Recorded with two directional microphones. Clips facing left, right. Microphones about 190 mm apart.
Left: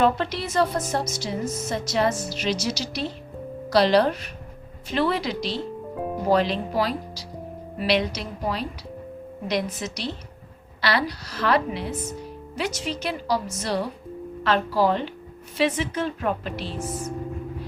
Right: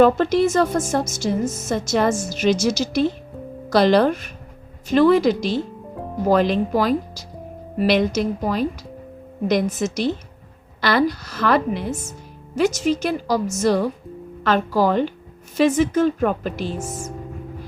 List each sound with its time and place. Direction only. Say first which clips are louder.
0.0 s a woman's voice: right 8 dB; 45° right (ahead or behind)